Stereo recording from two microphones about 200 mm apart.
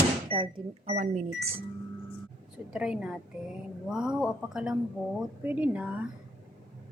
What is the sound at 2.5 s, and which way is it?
A woman's voice, 5° right (ahead or behind).